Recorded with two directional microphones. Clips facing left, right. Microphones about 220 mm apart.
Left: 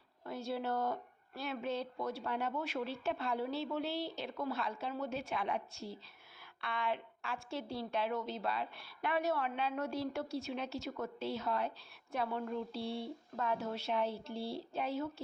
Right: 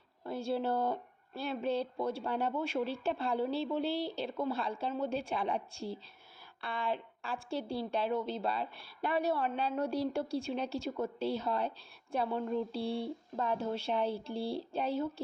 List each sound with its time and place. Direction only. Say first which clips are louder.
0.3 s speech: right 5 dB; 30° right (ahead or behind)